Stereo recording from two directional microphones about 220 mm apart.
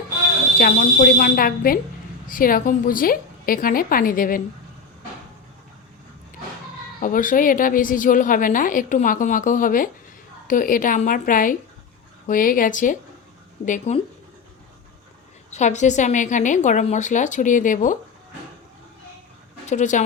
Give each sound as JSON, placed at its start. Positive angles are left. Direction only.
{"t": 0.6, "sound": "a woman's voice", "side_deg": 40}
{"t": 7.0, "sound": "a woman's voice", "side_deg": 40}
{"t": 15.5, "sound": "a woman's voice", "side_deg": 30}
{"t": 19.6, "sound": "speech", "side_deg": 35}